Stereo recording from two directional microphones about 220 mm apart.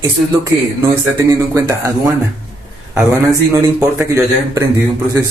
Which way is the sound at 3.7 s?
10° right (ahead or behind).